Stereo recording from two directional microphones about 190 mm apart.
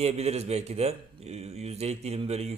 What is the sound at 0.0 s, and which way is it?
A man's voice, 35° right (ahead or behind).